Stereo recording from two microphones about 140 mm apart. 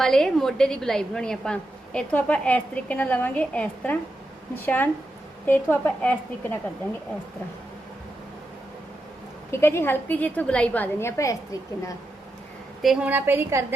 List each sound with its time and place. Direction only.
0.0 s a woman's voice: 5° left (ahead or behind)
9.5 s a woman's voice: 20° left (ahead or behind)
11.0 s a woman's voice: 20° left (ahead or behind)
12.8 s a woman's voice: 5° right (ahead or behind)